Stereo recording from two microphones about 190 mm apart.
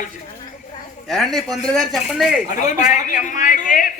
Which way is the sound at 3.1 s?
45° left (ahead or behind).